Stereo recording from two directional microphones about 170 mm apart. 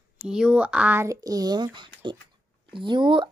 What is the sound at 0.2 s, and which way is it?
Speech, 5° right (ahead or behind).